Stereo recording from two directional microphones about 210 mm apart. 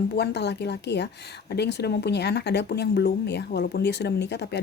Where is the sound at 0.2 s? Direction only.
55° left (ahead or behind).